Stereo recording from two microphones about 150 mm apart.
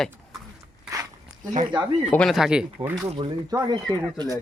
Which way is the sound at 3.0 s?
35° right (ahead or behind).